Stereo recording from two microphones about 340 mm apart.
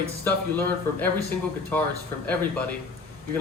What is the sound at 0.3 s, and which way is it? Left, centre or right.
Speech, centre.